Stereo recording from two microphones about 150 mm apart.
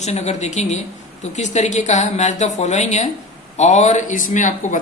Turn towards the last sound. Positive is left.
turn(degrees=55)  # may be behind; listen again after turning